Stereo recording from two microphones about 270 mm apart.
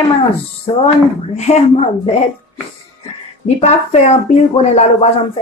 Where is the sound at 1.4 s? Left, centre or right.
Left.